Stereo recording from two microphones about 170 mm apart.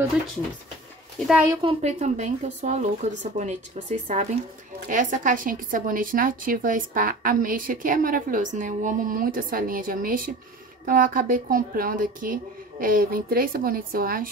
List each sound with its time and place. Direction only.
1.6 s a woman's voice: 35° right (ahead or behind); by 14.3 s 60° right (ahead or behind)